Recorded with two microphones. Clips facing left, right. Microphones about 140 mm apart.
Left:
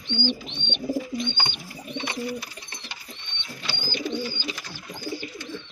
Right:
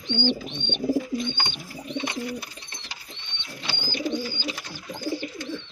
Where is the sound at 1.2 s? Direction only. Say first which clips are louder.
Even; 35° right (ahead or behind).